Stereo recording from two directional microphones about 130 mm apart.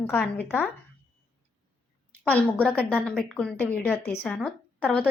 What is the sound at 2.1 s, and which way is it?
A woman's voice, 10° left (ahead or behind).